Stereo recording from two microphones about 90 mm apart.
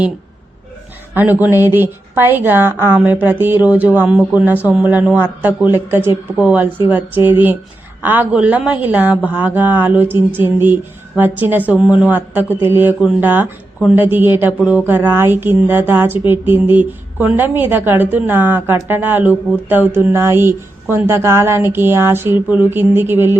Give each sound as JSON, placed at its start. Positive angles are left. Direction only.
{"t": 1.1, "sound": "a woman's voice", "side_deg": -20}